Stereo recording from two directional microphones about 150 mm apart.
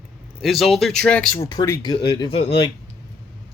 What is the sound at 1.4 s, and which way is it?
Speech, 20° left (ahead or behind).